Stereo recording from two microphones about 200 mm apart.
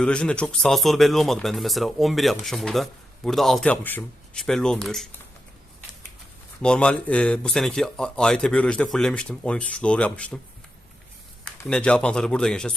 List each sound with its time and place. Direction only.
0.0 s a man's voice: 5° left (ahead or behind)
6.6 s a man's voice: 5° left (ahead or behind)
11.4 s a man's voice: 5° left (ahead or behind)